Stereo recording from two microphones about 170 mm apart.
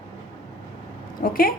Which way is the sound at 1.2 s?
60° left (ahead or behind).